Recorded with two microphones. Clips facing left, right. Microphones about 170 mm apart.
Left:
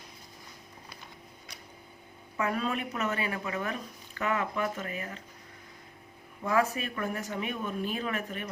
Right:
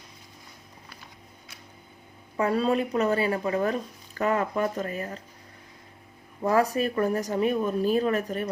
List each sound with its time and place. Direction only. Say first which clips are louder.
2.4 s speech: right 7 dB; 35° right (ahead or behind)
6.4 s speech: right 5 dB; 40° right (ahead or behind)